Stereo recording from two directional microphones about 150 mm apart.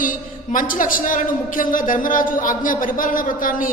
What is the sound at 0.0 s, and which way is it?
A man's voice, 65° left (ahead or behind).